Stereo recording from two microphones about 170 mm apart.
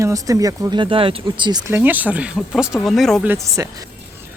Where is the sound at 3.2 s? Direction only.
20° right (ahead or behind).